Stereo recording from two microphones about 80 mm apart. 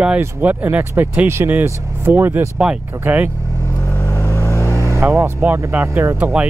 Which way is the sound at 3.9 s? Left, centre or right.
Left.